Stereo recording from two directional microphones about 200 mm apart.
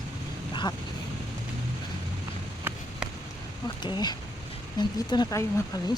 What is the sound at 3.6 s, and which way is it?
Speech, 20° left (ahead or behind).